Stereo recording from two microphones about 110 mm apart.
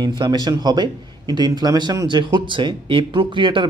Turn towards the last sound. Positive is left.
turn(degrees=-45)  # may be behind; listen again after turning